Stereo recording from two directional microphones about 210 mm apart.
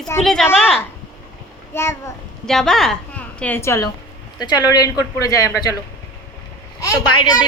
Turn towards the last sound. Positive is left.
turn(degrees=20)  # may be behind; listen again after turning